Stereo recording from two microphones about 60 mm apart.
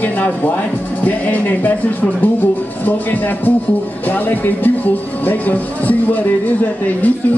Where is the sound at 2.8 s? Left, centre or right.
Left.